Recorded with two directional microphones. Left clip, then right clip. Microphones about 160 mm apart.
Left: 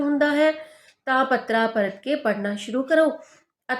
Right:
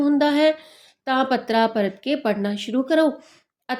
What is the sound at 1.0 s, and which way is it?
Speech, 30° right (ahead or behind).